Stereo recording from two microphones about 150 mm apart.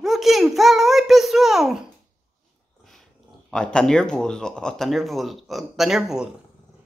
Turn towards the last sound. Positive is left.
turn(degrees=-5)  # may be behind; listen again after turning